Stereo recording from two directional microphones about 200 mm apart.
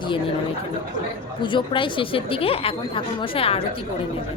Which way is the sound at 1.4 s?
25° left (ahead or behind).